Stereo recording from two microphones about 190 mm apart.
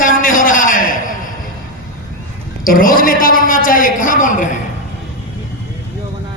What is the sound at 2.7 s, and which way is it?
A woman's voice, 50° left (ahead or behind).